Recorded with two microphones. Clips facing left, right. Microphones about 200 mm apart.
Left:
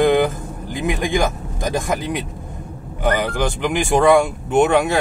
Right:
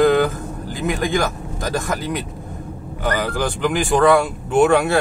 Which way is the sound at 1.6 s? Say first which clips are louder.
Left 2 dB; 20° left (ahead or behind).